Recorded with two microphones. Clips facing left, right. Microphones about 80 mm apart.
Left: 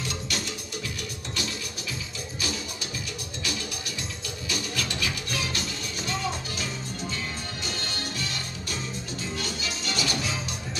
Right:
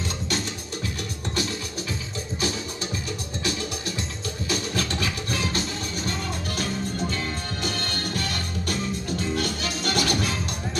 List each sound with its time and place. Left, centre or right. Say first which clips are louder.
4.5 s music: right 4 dB; right
7.6 s music: right 5 dB; right